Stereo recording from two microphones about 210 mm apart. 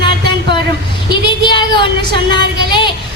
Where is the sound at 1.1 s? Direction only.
20° left (ahead or behind).